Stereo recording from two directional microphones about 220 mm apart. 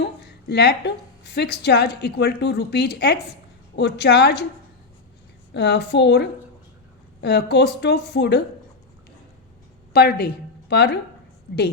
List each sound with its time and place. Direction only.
0.0 s a woman's voice: 50° left (ahead or behind)
5.5 s a woman's voice: 50° left (ahead or behind)
9.9 s a woman's voice: 45° left (ahead or behind)